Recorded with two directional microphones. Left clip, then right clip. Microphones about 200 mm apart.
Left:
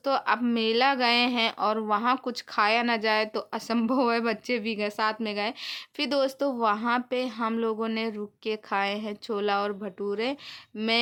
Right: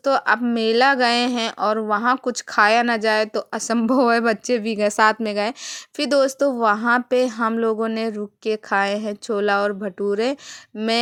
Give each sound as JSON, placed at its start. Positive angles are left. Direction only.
{"t": 0.0, "sound": "a woman's voice", "side_deg": -25}